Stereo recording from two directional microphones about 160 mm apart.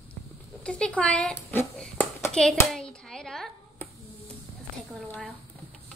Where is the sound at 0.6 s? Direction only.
5° left (ahead or behind).